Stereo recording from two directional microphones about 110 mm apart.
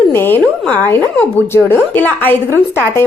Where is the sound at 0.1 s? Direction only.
20° left (ahead or behind).